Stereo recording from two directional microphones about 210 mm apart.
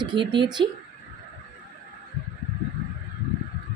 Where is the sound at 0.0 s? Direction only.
20° right (ahead or behind).